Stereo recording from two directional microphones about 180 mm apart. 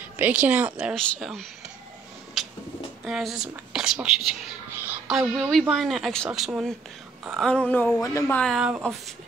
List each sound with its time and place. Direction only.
0.2 s speech: 10° right (ahead or behind)
2.4 s a sound: centre (ahead or behind)
3.1 s speech: centre (ahead or behind)
4.7 s a sound: 10° right (ahead or behind)
5.5 s speech: centre (ahead or behind)
8.0 s speech: 15° left (ahead or behind)
8.4 s speech: centre (ahead or behind)